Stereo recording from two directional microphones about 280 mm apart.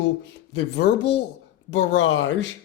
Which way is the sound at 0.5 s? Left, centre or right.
Left.